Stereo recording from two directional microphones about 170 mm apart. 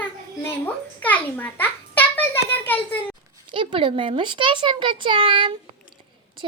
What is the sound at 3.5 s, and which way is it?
A child's voice, 30° right (ahead or behind).